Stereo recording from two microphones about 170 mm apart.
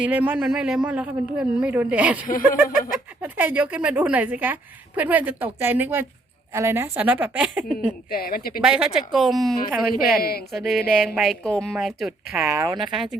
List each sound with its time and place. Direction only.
0.0 s speech: 10° right (ahead or behind)
2.2 s speech: 55° left (ahead or behind)
3.2 s speech: 10° right (ahead or behind)
8.1 s speech: 60° left (ahead or behind)
8.6 s a woman's voice: 5° right (ahead or behind)
10.2 s speech: 65° left (ahead or behind)
10.5 s a woman's voice: centre (ahead or behind); by 12.8 s 15° right (ahead or behind)
12.8 s a woman's voice: centre (ahead or behind)